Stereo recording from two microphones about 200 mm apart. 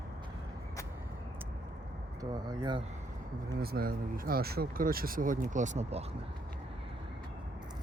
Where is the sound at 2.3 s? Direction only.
20° right (ahead or behind).